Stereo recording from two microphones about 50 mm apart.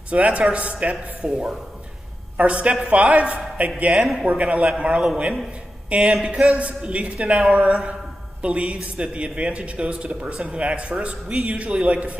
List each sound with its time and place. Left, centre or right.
0.1 s a man's voice: right
1.2 s speech: centre
2.3 s a man's voice: right
3.9 s a man's voice: centre
4.3 s a man's voice: right